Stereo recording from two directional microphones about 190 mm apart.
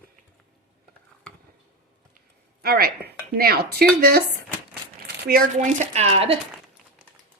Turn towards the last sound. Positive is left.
turn(degrees=-30)  # may be behind; listen again after turning